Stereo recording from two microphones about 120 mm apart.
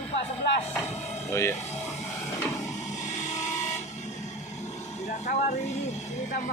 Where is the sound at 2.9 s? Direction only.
85° left.